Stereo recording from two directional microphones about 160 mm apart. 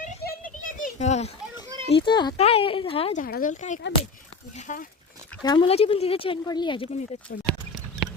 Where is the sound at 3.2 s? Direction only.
75° left (ahead or behind).